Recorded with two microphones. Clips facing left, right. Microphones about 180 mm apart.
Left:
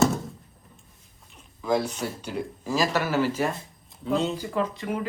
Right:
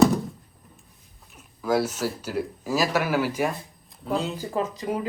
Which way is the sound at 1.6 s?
5° right (ahead or behind).